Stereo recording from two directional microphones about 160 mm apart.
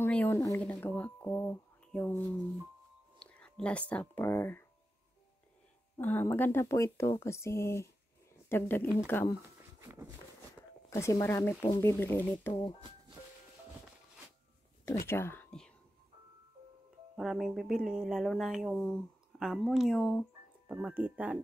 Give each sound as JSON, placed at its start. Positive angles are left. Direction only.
{"t": 0.0, "sound": "speech", "side_deg": 10}
{"t": 5.9, "sound": "speech", "side_deg": 10}
{"t": 9.8, "sound": "a sound", "side_deg": -15}
{"t": 10.9, "sound": "speech", "side_deg": 20}
{"t": 15.0, "sound": "speech", "side_deg": 15}
{"t": 17.2, "sound": "speech", "side_deg": 0}
{"t": 20.7, "sound": "speech", "side_deg": -10}